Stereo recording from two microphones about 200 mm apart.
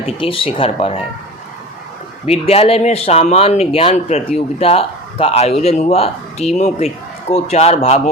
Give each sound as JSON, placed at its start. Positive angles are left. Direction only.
{"t": 0.0, "sound": "speech", "side_deg": 25}
{"t": 2.2, "sound": "speech", "side_deg": 30}